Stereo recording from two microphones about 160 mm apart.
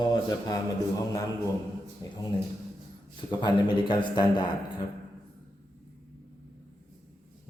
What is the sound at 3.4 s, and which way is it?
A man's voice, 30° left (ahead or behind).